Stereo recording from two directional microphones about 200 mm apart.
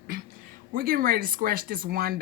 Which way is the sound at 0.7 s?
45° right (ahead or behind).